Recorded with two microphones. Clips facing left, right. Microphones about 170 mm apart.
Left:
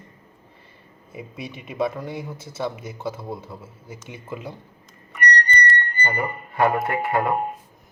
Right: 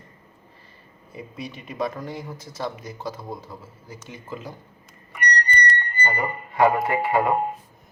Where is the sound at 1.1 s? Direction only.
20° left (ahead or behind).